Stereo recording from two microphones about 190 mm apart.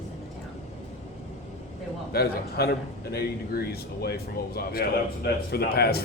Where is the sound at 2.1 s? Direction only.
55° left (ahead or behind).